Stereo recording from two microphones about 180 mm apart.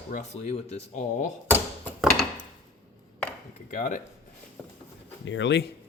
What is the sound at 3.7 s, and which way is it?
Speech, 45° left (ahead or behind).